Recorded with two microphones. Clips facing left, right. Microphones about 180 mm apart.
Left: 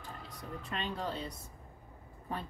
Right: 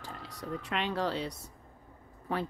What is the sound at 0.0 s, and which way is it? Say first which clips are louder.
Speech: right 4 dB; 80° right.